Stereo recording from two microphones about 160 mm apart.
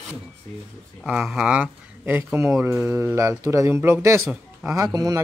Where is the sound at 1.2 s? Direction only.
10° right (ahead or behind).